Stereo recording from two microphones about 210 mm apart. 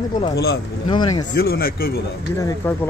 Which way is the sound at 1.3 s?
45° left (ahead or behind).